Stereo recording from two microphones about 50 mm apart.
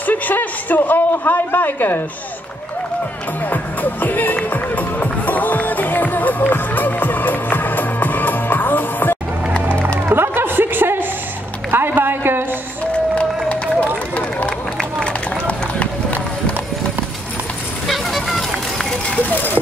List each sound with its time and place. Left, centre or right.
0.0 s a man's voice: left
3.4 s speech: left
4.5 s music: left
10.1 s a sound: right
13.1 s run: left
17.8 s run: centre
19.1 s a sound: left